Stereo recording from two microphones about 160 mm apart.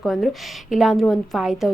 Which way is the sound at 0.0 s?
Centre (ahead or behind).